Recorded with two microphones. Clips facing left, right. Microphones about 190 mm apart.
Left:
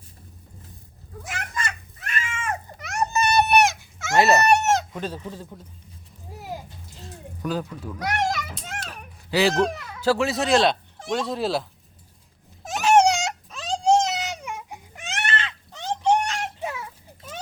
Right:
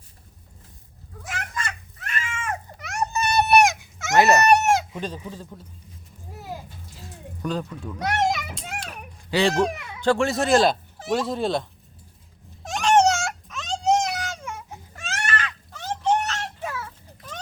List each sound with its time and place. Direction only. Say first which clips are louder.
1.3 s a sound: even; centre (ahead or behind)
2.4 s baby cry: left 1 dB; 5° right (ahead or behind)
3.7 s dog: right 1 dB; 15° right (ahead or behind)
4.6 s chicken: right 1 dB; 10° right (ahead or behind)
7.4 s speech: even; 5° left (ahead or behind)
7.9 s a child's voice: right 2 dB; 25° right (ahead or behind)
8.8 s a sound: right 1 dB; centre (ahead or behind)
10.0 s speech: right 1 dB; 5° left (ahead or behind)
12.6 s a sound: left 1 dB; 5° left (ahead or behind)
13.5 s baby cry: left 2 dB; 35° left (ahead or behind); by 17.4 s 15° left (ahead or behind)